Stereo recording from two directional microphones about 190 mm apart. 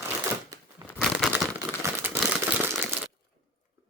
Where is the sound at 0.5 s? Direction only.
15° right (ahead or behind).